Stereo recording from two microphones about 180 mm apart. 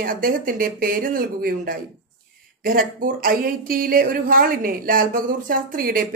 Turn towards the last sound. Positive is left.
turn(degrees=-55)  # may be behind; listen again after turning